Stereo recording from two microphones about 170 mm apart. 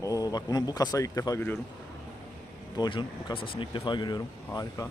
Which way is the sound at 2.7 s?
25° left (ahead or behind).